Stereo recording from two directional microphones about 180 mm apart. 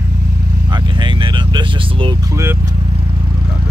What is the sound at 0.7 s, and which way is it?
Speech, 25° right (ahead or behind).